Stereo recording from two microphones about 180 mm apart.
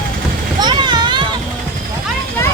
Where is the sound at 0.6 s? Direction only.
25° right (ahead or behind).